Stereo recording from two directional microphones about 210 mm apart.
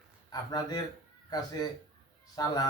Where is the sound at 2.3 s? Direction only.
15° left (ahead or behind).